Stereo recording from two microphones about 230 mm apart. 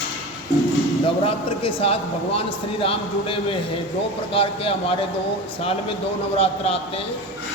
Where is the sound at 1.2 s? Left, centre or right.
Left.